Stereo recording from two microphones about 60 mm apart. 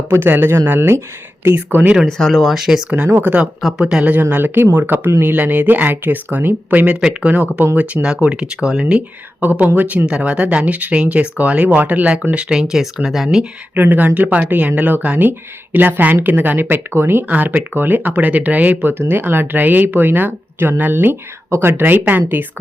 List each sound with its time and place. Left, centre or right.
0.1 s speech: right
1.5 s speech: right
2.0 s speech: centre
3.8 s speech: centre
4.1 s speech: right
7.0 s speech: centre
7.3 s speech: right
8.0 s speech: centre
9.4 s speech: right; by 13.4 s centre
13.7 s speech: right
17.2 s speech: right